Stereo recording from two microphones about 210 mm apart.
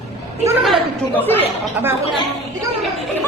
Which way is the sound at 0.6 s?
5° left (ahead or behind).